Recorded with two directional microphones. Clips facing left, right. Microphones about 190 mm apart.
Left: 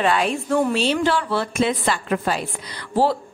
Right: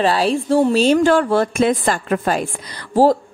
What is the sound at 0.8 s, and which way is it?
A woman's voice, 45° right (ahead or behind).